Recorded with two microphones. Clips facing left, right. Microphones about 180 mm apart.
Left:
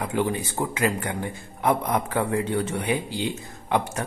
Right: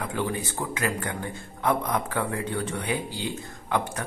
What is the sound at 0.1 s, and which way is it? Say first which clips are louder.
A man's voice: left 4 dB; 20° left (ahead or behind).